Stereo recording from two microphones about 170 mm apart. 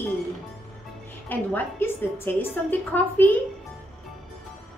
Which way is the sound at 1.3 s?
10° left (ahead or behind).